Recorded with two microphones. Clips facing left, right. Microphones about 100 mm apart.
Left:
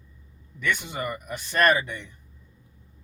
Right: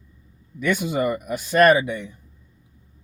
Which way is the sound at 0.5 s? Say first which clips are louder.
Right 7 dB; 10° right (ahead or behind).